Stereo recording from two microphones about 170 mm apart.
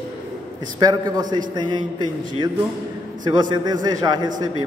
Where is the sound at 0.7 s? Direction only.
25° right (ahead or behind).